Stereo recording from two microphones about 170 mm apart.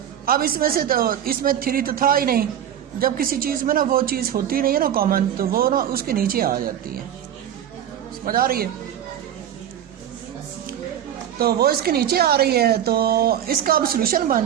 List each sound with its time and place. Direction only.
0.3 s a woman's voice: 60° right (ahead or behind)
8.2 s a woman's voice: 60° right (ahead or behind)
11.3 s a woman's voice: 65° right (ahead or behind)